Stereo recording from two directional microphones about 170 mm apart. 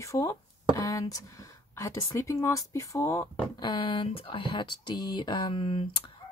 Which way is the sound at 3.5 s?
25° left (ahead or behind).